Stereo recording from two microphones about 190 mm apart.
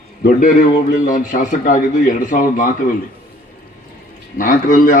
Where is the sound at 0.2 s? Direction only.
45° left (ahead or behind).